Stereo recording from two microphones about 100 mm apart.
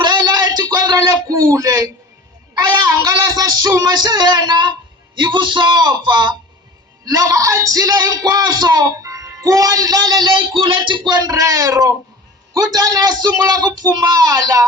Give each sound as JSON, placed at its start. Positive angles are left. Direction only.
{"t": 0.0, "sound": "a sound", "side_deg": -45}
{"t": 3.0, "sound": "music", "side_deg": -35}
{"t": 7.0, "sound": "speech", "side_deg": -35}
{"t": 11.1, "sound": "speech", "side_deg": -40}